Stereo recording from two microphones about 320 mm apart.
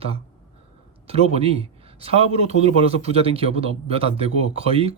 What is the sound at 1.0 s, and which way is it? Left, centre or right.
Speech, centre.